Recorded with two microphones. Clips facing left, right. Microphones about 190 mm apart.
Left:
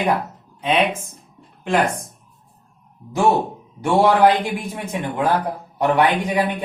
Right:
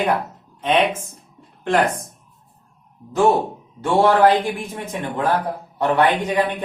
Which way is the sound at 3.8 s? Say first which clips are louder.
Even; 15° left (ahead or behind).